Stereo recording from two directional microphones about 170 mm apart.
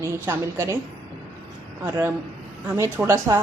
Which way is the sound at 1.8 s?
15° right (ahead or behind).